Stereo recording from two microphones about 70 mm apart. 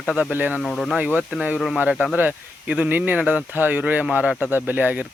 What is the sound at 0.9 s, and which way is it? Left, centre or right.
Speech, centre.